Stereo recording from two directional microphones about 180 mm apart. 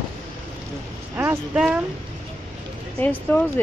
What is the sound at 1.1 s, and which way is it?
Speech, 10° right (ahead or behind).